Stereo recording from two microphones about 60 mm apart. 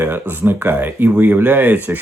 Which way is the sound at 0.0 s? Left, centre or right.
Right.